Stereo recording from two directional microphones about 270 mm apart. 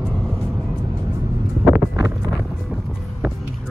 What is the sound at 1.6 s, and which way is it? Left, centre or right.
Wind noise, centre.